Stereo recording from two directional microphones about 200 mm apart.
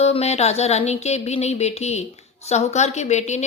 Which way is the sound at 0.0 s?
30° left (ahead or behind).